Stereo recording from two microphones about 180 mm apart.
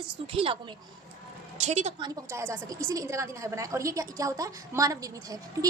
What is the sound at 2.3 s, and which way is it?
A woman's voice, 15° right (ahead or behind).